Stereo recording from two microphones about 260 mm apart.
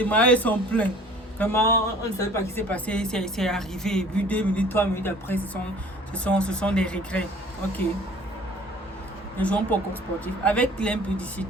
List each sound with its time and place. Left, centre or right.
0.0 s a woman's voice: centre
9.4 s a woman's voice: centre